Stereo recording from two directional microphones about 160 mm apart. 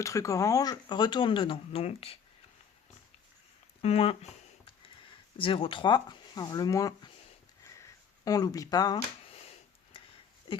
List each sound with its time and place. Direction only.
0.0 s speech: 20° left (ahead or behind); by 2.1 s 40° left (ahead or behind)
3.8 s speech: 40° left (ahead or behind)
5.4 s speech: 35° left (ahead or behind)
8.2 s speech: 25° left (ahead or behind)